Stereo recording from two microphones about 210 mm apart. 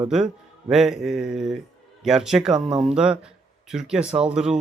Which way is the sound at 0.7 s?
Centre (ahead or behind).